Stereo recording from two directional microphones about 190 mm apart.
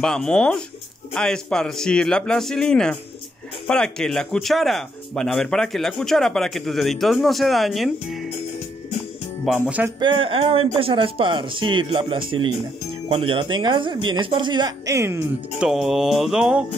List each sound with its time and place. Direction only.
0.0 s speech: 5° left (ahead or behind)
9.4 s speech: 5° right (ahead or behind)
9.9 s speech: 25° right (ahead or behind)
15.7 s speech: centre (ahead or behind)